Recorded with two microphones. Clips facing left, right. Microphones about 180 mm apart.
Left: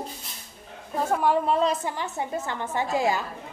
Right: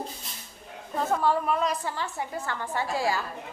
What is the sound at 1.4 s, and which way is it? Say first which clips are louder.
A woman's voice: left 4 dB; 30° left (ahead or behind).